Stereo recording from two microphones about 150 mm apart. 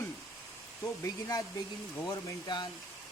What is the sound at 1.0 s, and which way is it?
Speech, 20° left (ahead or behind).